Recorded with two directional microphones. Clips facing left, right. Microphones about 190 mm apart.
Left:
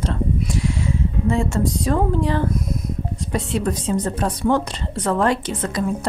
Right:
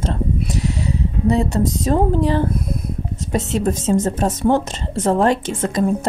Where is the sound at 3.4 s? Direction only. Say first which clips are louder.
Right 3 dB; 45° right (ahead or behind).